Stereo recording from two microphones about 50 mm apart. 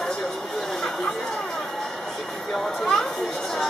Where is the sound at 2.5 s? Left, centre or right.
Centre.